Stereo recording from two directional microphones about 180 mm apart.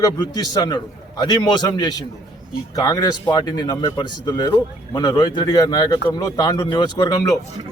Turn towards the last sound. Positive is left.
turn(degrees=20)  # may be behind; listen again after turning